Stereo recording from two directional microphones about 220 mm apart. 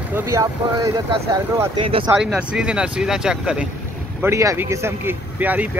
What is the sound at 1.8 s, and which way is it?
Speech, 25° right (ahead or behind).